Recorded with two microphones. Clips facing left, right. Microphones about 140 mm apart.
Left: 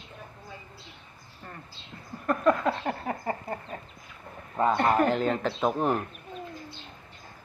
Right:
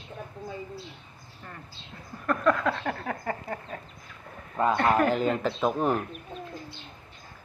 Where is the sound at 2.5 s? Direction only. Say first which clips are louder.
Left 1 dB; 25° left (ahead or behind).